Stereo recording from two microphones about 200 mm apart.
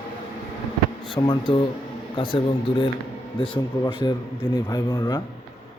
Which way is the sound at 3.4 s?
25° left (ahead or behind).